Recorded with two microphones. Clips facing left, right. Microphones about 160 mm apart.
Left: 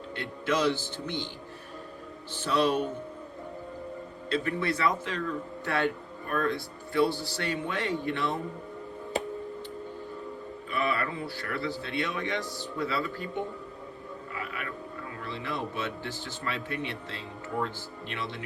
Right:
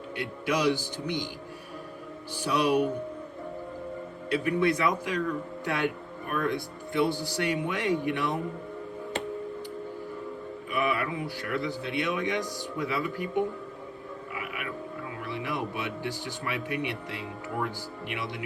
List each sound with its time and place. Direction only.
0.2 s speech: 15° right (ahead or behind)
2.3 s speech: 10° right (ahead or behind)
4.3 s speech: 15° right (ahead or behind)
10.7 s speech: 15° right (ahead or behind)
14.3 s a sound: 15° right (ahead or behind)
15.2 s speech: 15° right (ahead or behind)